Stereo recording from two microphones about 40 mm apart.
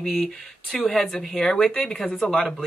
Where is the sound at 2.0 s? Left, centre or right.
Left.